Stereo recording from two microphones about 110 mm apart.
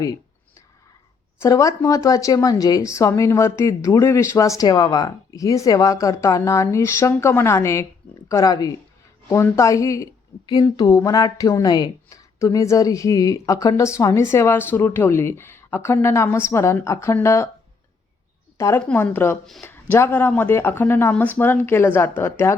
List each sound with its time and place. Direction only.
1.4 s a woman's voice: 30° left (ahead or behind)
18.5 s a woman's voice: 25° left (ahead or behind)